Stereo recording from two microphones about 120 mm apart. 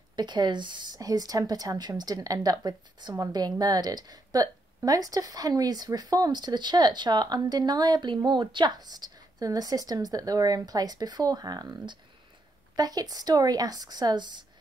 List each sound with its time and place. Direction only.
0.1 s a woman's voice: 35° right (ahead or behind)